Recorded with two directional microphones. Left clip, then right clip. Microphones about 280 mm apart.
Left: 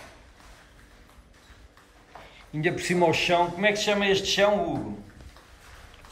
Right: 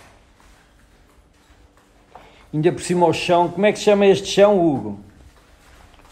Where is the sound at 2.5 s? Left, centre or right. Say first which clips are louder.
Right 6 dB; centre.